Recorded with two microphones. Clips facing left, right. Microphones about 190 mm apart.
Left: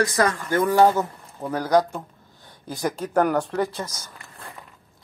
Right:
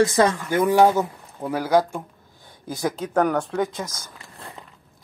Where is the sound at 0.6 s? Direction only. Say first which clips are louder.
Right 1 dB; 10° right (ahead or behind).